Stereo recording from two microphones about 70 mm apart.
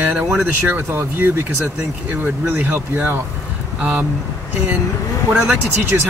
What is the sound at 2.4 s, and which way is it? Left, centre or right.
Speech, right.